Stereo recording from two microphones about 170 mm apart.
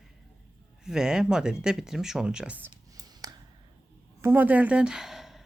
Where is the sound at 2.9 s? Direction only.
20° right (ahead or behind).